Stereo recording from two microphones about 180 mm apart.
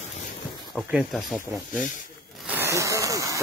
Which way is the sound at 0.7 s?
Centre (ahead or behind).